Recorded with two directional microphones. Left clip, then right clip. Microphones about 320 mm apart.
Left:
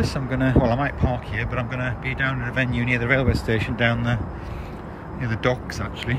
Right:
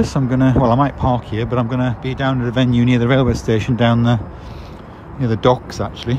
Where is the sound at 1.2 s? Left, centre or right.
Centre.